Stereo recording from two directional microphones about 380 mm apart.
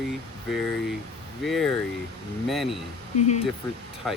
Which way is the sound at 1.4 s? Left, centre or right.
Centre.